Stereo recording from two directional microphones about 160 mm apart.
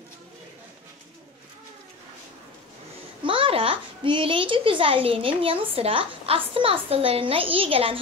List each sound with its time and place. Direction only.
3.3 s a child's voice: 35° right (ahead or behind)